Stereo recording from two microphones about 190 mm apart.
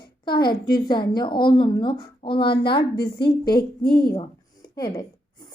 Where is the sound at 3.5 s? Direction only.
55° left (ahead or behind).